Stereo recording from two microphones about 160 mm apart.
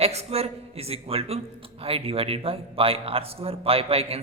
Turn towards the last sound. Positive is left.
turn(degrees=-40)  # may be behind; listen again after turning